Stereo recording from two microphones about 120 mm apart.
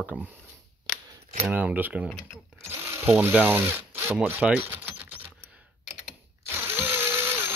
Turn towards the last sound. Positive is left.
turn(degrees=-20)  # may be behind; listen again after turning